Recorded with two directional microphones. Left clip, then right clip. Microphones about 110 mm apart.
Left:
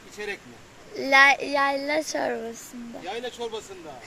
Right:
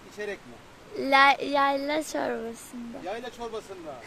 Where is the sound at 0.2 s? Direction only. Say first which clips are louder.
Left 1 dB; 25° right (ahead or behind).